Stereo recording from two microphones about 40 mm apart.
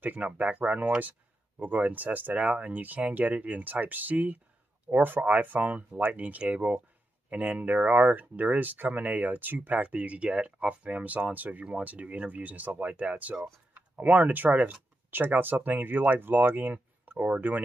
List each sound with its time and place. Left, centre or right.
0.0 s speech: right
9.8 s speech: right
15.0 s speech: right